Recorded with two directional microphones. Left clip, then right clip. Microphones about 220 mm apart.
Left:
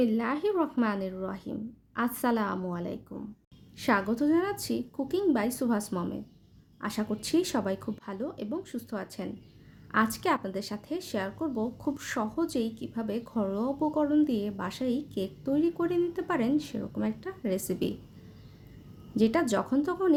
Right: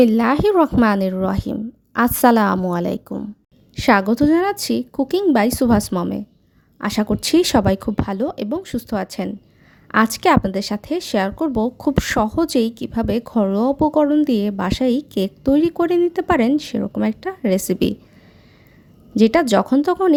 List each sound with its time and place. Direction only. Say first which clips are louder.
0.0 s a woman's voice: right 13 dB; 45° right (ahead or behind)
19.1 s speech: right 12 dB; 45° right (ahead or behind)